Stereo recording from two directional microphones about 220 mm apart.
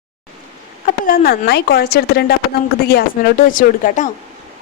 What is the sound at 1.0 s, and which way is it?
Speech, 40° left (ahead or behind).